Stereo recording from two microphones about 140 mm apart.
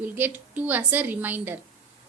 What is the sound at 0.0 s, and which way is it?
A woman's voice, 10° right (ahead or behind).